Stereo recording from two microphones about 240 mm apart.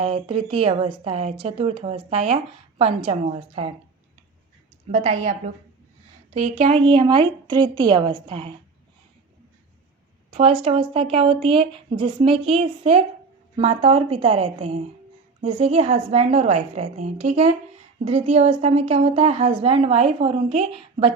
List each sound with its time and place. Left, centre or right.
0.0 s a woman's voice: right
4.9 s a woman's voice: right
6.3 s a woman's voice: right
10.3 s a woman's voice: right